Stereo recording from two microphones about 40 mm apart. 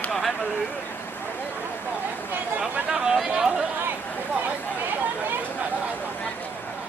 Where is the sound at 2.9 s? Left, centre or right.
Centre.